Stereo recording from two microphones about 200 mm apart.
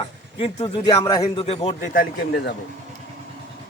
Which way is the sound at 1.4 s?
30° left (ahead or behind).